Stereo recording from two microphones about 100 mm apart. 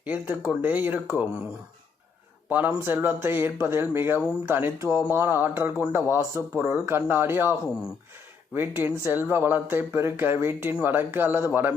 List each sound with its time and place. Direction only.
0.0 s speech: 15° right (ahead or behind)
2.5 s speech: 15° right (ahead or behind)
4.9 s speech: 10° right (ahead or behind)
5.1 s speech: 25° right (ahead or behind)
8.5 s speech: 20° right (ahead or behind)